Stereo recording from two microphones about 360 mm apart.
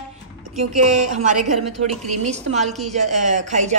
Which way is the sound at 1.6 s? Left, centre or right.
Centre.